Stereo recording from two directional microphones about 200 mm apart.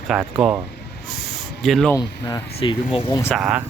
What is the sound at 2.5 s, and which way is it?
Speech, 30° left (ahead or behind).